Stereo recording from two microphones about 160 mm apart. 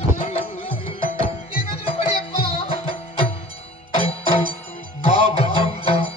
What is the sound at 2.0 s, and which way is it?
Music, 40° left (ahead or behind).